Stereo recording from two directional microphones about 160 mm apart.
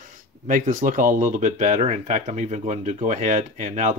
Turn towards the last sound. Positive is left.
turn(degrees=-50)  # may be behind; listen again after turning